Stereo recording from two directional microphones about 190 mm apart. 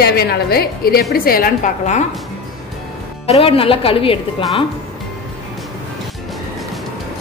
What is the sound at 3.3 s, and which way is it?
A woman's voice, 30° left (ahead or behind).